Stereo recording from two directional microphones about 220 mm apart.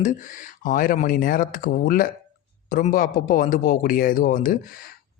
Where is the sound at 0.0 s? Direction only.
35° left (ahead or behind).